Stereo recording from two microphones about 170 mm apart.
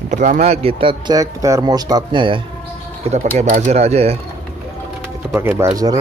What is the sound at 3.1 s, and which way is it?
Speech, 45° right (ahead or behind).